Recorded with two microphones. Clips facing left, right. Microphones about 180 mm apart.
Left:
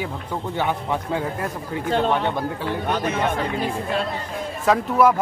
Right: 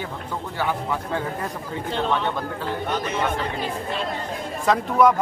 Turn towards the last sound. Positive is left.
turn(degrees=5)  # may be behind; listen again after turning